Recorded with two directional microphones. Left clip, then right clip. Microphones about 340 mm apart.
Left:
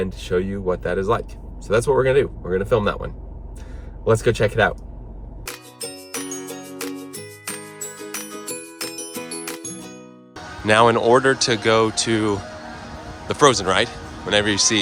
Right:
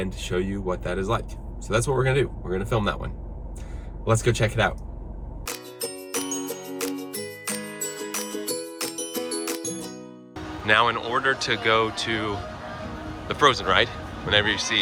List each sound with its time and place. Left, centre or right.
0.0 s speech: centre
5.8 s music: centre
8.4 s music: centre
10.7 s speech: centre